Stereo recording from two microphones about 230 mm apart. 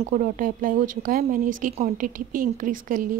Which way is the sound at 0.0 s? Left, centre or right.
Right.